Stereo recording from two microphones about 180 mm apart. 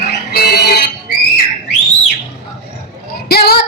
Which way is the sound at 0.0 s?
65° left (ahead or behind).